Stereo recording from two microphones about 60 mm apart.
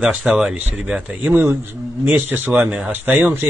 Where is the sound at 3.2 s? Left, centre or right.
Right.